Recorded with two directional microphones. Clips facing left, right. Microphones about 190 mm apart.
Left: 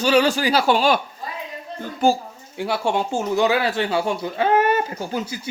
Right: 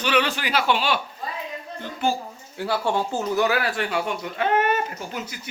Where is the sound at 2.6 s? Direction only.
20° left (ahead or behind).